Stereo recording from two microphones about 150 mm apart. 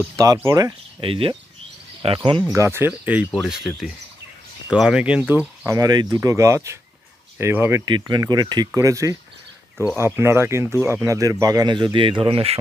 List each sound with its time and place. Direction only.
0.1 s speech: 20° right (ahead or behind)
1.0 s speech: 40° right (ahead or behind)
2.5 s speech: 20° right (ahead or behind)
5.7 s speech: 25° right (ahead or behind)
7.9 s speech: 30° right (ahead or behind)